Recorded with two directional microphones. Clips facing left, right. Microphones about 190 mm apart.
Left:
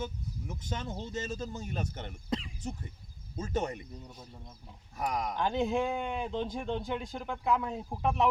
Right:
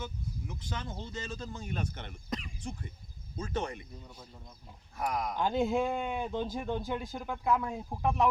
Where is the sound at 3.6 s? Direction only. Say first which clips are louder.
Left 3 dB; 20° left (ahead or behind).